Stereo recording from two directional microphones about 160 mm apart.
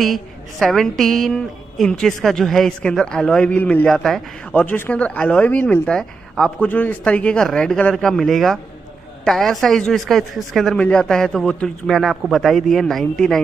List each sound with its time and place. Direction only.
0.0 s a woman's voice: centre (ahead or behind)